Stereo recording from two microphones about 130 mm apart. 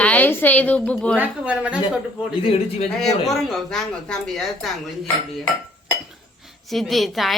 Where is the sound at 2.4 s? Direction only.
50° left (ahead or behind).